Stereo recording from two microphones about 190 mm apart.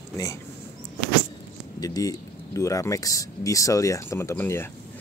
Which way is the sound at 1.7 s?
20° left (ahead or behind).